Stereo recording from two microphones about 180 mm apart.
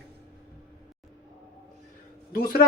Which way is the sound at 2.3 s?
55° left (ahead or behind).